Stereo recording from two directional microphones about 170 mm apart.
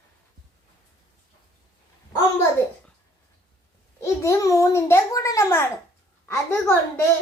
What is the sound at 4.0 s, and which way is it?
A child's voice, 20° left (ahead or behind).